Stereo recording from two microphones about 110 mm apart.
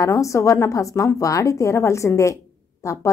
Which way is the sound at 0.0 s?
30° left (ahead or behind).